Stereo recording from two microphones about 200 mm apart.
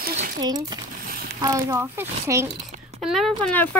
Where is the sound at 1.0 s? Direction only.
45° right (ahead or behind).